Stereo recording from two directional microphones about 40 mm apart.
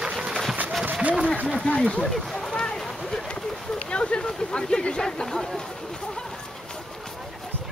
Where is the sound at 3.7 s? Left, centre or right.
Left.